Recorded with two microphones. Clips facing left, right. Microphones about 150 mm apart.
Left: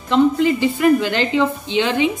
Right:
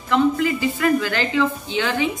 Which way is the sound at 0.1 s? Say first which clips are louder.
Left 4 dB; 25° left (ahead or behind).